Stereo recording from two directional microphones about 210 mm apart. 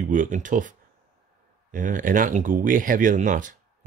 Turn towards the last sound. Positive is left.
turn(degrees=-40)  # may be behind; listen again after turning